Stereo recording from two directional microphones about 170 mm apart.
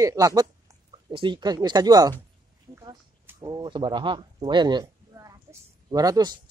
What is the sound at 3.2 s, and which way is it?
Speech, 20° right (ahead or behind).